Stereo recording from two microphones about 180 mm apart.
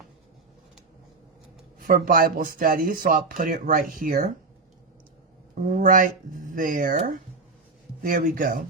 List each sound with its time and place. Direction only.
1.8 s speech: 50° right (ahead or behind)
5.7 s speech: 50° right (ahead or behind)
8.0 s speech: 50° right (ahead or behind)